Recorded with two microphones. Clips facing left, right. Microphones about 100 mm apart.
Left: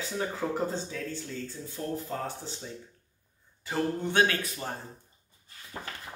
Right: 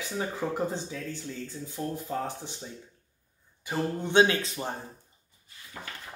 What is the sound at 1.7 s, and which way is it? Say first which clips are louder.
Speech: right 2 dB; 15° right (ahead or behind).